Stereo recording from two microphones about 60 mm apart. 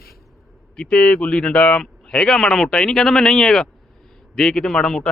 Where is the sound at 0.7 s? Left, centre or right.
Centre.